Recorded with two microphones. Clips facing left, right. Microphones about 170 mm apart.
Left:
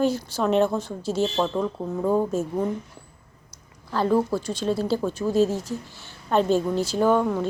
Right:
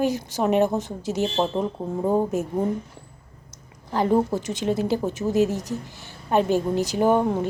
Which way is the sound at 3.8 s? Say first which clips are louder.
Right 1 dB; 20° right (ahead or behind).